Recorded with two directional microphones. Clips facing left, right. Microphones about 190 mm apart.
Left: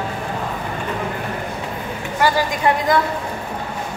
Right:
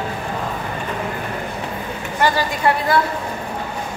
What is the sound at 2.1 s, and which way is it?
Speech, 10° left (ahead or behind).